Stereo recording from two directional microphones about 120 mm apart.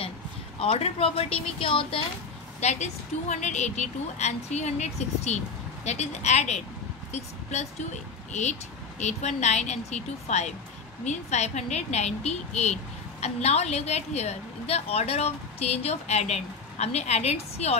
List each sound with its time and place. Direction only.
0.6 s speech: 55° left (ahead or behind)
2.6 s a woman's voice: 75° left (ahead or behind)